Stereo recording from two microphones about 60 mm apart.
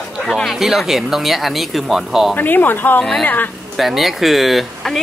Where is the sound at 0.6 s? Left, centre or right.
Centre.